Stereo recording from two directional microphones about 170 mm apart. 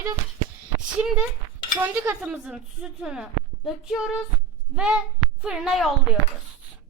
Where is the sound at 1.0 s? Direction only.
5° right (ahead or behind).